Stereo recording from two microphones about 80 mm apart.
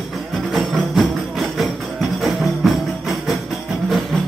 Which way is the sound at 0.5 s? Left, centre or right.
Centre.